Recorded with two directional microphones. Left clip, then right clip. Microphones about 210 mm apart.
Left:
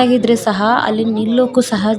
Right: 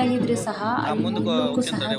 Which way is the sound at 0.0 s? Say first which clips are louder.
Left 10 dB; 40° left (ahead or behind).